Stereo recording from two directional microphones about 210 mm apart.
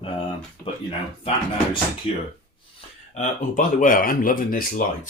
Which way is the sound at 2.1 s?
25° left (ahead or behind).